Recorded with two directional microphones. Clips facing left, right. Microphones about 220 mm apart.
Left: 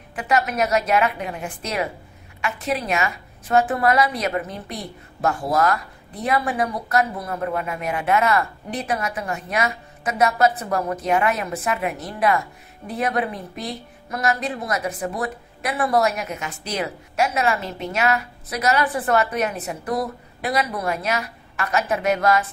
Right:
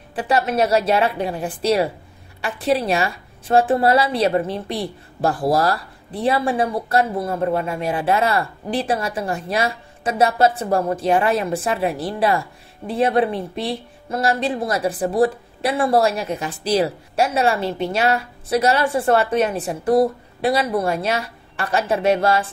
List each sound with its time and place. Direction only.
0.1 s a woman's voice: 30° right (ahead or behind)